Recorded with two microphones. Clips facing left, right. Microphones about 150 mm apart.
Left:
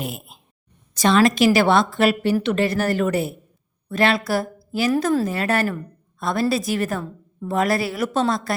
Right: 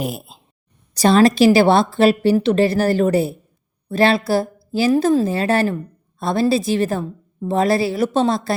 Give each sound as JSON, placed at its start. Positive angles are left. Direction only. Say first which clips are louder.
{"t": 0.0, "sound": "a woman's voice", "louder": "right 5 dB", "side_deg": -35}